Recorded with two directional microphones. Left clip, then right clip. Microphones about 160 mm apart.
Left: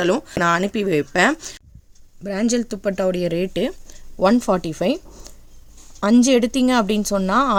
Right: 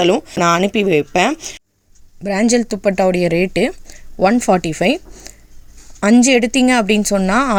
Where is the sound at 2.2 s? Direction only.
30° right (ahead or behind).